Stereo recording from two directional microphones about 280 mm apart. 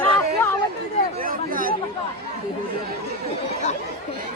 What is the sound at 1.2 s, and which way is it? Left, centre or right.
Chatter, right.